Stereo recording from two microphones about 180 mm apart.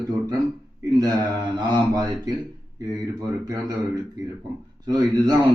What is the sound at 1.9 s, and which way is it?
Speech, 20° right (ahead or behind).